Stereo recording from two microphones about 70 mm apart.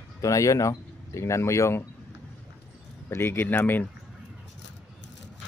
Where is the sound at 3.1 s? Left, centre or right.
Left.